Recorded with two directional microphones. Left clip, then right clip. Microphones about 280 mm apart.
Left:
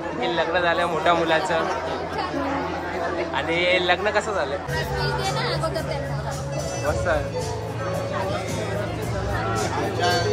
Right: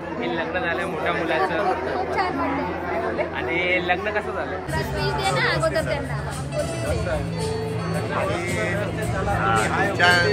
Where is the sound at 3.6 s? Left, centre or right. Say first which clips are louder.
Left 2 dB; centre.